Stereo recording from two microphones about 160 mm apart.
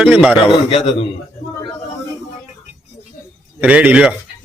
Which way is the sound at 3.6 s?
10° right (ahead or behind).